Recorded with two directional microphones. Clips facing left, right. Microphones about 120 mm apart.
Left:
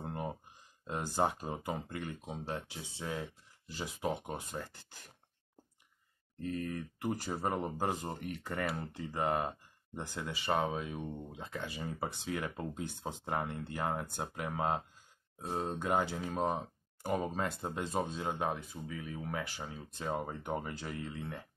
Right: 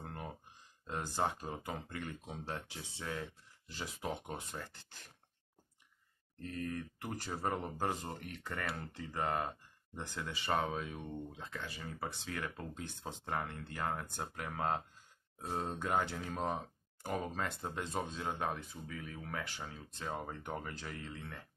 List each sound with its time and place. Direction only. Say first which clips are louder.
0.0 s a sound: left 6 dB; 20° left (ahead or behind)
0.8 s speech: left 4 dB; 10° left (ahead or behind)
1.5 s speech: left 4 dB; 25° left (ahead or behind)
2.4 s speech: left 3 dB; 10° left (ahead or behind)
6.4 s speech: left 3 dB; 5° left (ahead or behind)
9.9 s speech: left 2 dB; 10° left (ahead or behind)